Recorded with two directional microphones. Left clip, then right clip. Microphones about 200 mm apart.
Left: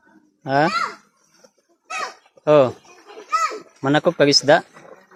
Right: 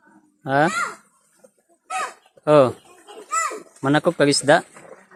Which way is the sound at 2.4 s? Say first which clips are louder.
Even; centre (ahead or behind).